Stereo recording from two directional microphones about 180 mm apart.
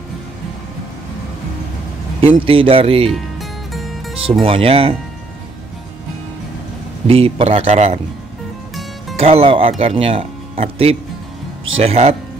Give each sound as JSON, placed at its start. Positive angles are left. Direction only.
{"t": 2.2, "sound": "speech", "side_deg": -30}
{"t": 3.1, "sound": "music", "side_deg": 0}
{"t": 4.1, "sound": "speech", "side_deg": -30}
{"t": 7.1, "sound": "speech", "side_deg": -30}
{"t": 9.2, "sound": "speech", "side_deg": -35}